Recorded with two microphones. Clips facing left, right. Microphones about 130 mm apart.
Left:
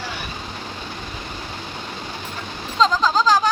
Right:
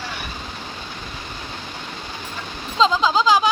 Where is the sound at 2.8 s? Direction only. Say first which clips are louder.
Even; 15° right (ahead or behind).